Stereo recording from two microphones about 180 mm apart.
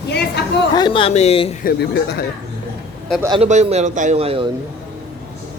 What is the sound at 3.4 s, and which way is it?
A man's voice, 35° right (ahead or behind).